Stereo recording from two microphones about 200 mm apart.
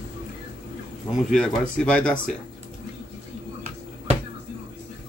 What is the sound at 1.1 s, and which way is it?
Speech, centre (ahead or behind).